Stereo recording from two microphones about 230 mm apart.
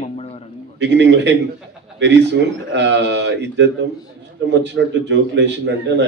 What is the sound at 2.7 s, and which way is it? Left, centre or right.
A man's voice, right.